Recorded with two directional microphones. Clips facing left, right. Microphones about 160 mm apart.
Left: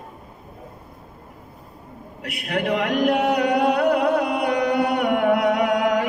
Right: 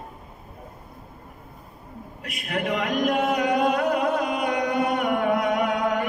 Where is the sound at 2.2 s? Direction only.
70° left (ahead or behind).